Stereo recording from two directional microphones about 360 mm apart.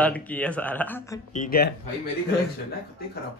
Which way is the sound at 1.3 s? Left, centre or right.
Left.